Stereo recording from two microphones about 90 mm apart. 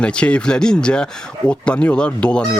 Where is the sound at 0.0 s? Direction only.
10° left (ahead or behind).